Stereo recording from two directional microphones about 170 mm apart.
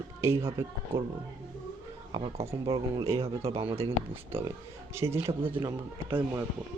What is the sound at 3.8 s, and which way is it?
Speech, 15° right (ahead or behind).